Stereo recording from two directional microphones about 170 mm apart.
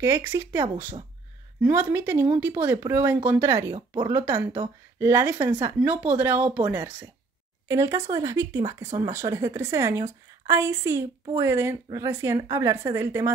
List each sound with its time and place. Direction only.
0.0 s a woman's voice: 15° right (ahead or behind)
3.7 s speech: 25° right (ahead or behind)
4.1 s a woman's voice: 15° right (ahead or behind)